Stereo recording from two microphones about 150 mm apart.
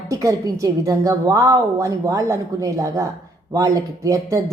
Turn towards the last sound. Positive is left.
turn(degrees=-20)  # may be behind; listen again after turning